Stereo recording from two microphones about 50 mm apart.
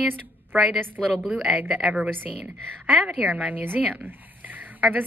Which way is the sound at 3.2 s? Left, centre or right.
Right.